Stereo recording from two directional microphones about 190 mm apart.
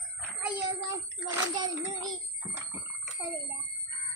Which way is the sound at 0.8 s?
15° right (ahead or behind).